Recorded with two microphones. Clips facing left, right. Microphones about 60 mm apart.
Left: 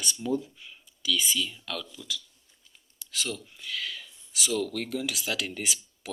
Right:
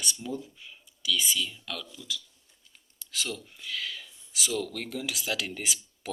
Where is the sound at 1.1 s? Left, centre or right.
Centre.